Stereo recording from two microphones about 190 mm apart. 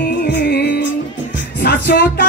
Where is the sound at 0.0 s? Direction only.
50° left (ahead or behind).